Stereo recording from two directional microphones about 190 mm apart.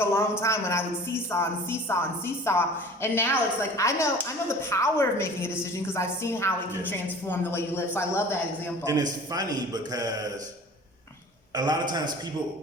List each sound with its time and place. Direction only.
0.0 s a woman's voice: 15° left (ahead or behind)
8.8 s a man's voice: 20° right (ahead or behind)
11.5 s a man's voice: 20° right (ahead or behind)